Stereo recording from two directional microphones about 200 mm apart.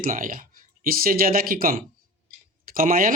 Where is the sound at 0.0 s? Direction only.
45° right (ahead or behind).